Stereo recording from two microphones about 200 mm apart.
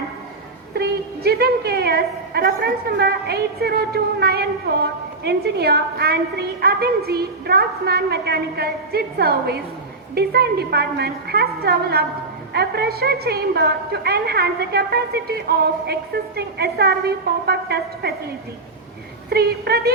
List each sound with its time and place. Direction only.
0.7 s a woman's voice: 55° right (ahead or behind)
19.3 s a woman's voice: 50° right (ahead or behind)